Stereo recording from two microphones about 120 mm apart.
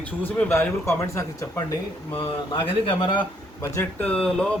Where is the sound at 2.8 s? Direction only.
40° left (ahead or behind).